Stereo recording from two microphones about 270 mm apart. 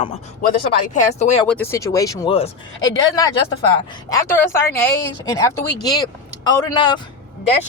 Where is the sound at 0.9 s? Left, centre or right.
Left.